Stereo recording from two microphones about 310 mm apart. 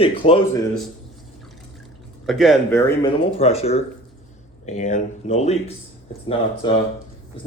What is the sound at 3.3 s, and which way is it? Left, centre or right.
Speech, centre.